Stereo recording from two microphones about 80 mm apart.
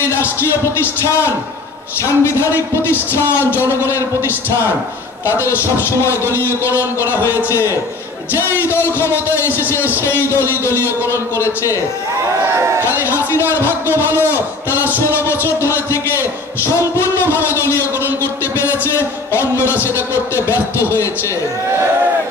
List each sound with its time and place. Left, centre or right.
0.0 s speech: left
2.0 s speech: left
10.6 s speech: left
13.0 s a man's voice: left
18.2 s a sound: left
20.3 s speech: left